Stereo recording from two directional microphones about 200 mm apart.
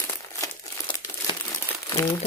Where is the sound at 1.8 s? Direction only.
15° left (ahead or behind).